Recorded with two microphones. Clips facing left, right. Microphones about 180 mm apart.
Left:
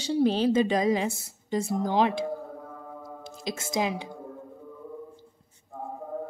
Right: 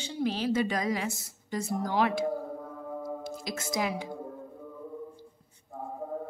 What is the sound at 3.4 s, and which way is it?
Speech, 25° left (ahead or behind).